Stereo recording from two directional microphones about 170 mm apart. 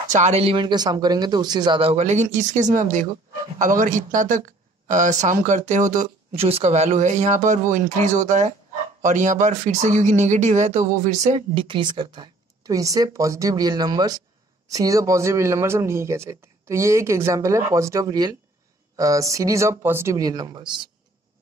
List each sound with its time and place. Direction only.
0.1 s speech: 40° right (ahead or behind)
11.5 s speech: 30° right (ahead or behind)